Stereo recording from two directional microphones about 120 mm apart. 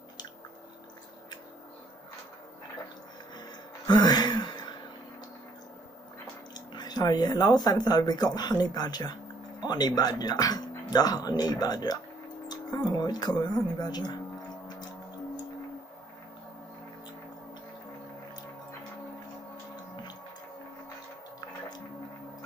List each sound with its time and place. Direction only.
3.3 s gasp: 35° left (ahead or behind)
6.5 s speech: 35° left (ahead or behind)